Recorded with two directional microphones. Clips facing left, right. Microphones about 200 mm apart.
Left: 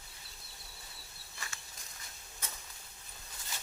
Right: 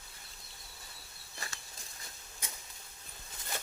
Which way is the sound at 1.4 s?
35° right (ahead or behind).